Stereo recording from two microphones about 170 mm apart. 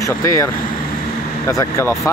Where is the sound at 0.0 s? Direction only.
20° left (ahead or behind).